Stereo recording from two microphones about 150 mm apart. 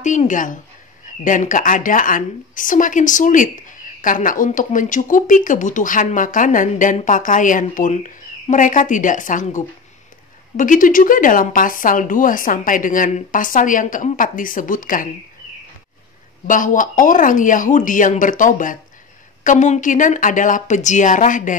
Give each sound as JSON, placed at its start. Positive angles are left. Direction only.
{"t": 0.0, "sound": "speech", "side_deg": 55}
{"t": 16.4, "sound": "speech", "side_deg": 60}